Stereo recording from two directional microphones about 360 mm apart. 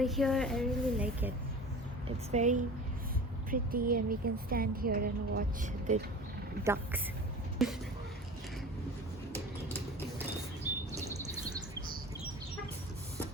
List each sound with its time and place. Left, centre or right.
0.0 s speech: centre
2.3 s speech: centre
7.6 s speech: centre